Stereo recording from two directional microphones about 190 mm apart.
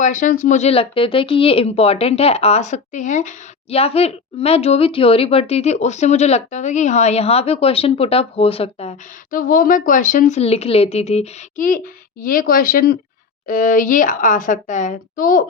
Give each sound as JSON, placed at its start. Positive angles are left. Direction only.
{"t": 0.0, "sound": "a woman's voice", "side_deg": 40}